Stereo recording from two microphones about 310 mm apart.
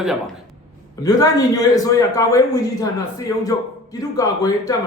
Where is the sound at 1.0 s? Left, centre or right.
Centre.